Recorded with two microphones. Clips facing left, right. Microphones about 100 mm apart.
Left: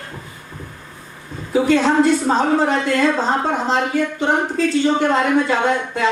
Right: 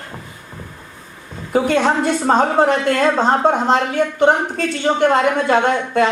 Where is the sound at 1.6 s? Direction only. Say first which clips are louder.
Left 3 dB; 55° right (ahead or behind).